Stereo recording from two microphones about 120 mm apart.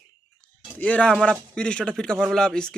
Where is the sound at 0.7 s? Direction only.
10° left (ahead or behind).